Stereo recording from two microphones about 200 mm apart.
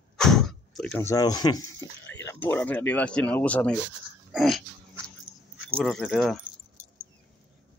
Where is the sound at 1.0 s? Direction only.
20° left (ahead or behind).